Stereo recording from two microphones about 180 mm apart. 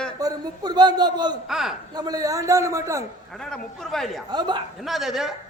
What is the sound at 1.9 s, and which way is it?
A man's voice, 20° right (ahead or behind).